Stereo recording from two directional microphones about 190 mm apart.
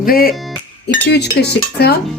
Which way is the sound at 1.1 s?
60° left (ahead or behind).